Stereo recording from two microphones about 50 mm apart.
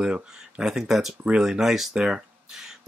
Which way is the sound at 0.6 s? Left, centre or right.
Centre.